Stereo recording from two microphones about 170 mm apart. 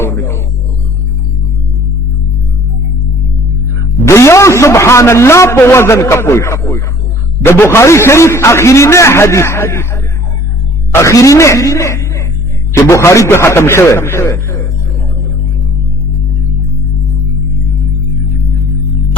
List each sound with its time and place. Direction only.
0.0 s a sound: 15° left (ahead or behind)
4.0 s a man's voice: 15° left (ahead or behind)
11.0 s a man's voice: 15° left (ahead or behind)